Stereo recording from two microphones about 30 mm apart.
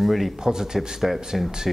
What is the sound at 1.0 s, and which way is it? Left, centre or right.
Speech, centre.